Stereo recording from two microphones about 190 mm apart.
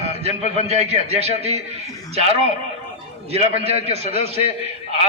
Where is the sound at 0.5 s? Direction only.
35° right (ahead or behind).